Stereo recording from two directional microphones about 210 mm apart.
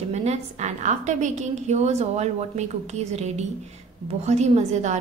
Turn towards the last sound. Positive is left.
turn(degrees=-35)  # may be behind; listen again after turning